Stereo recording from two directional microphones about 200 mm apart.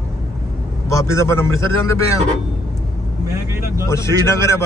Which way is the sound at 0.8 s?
15° left (ahead or behind).